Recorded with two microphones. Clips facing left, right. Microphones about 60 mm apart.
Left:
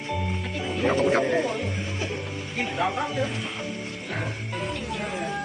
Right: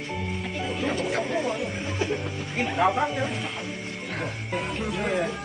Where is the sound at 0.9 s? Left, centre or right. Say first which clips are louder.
Left 7 dB; left.